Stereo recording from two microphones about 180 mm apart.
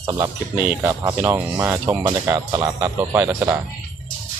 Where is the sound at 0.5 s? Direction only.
10° right (ahead or behind).